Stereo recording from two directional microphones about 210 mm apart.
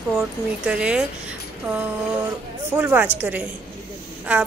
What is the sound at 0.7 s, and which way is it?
Speech, 5° right (ahead or behind).